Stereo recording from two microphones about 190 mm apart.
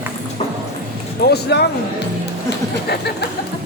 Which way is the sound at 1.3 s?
60° left (ahead or behind).